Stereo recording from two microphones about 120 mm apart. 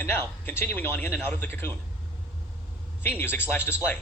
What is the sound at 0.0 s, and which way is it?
A man's voice, 15° left (ahead or behind).